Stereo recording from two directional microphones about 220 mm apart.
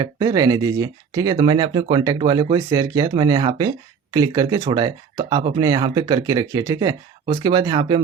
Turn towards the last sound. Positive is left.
turn(degrees=-20)  # may be behind; listen again after turning